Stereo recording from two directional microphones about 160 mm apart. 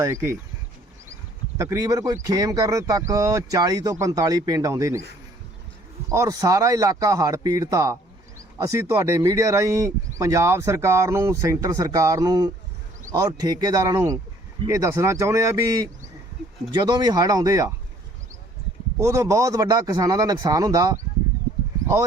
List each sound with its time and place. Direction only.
0.0 s speech: 15° right (ahead or behind)
1.5 s speech: 20° right (ahead or behind)
6.1 s speech: 20° right (ahead or behind)
18.9 s speech: 20° right (ahead or behind)